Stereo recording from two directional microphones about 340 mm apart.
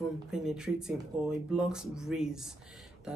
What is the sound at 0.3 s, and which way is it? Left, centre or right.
Speech, centre.